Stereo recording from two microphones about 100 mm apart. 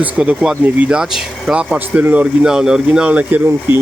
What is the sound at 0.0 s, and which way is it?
Speech, 10° right (ahead or behind).